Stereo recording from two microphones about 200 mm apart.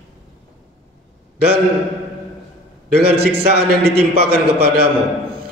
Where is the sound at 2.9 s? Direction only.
50° right (ahead or behind).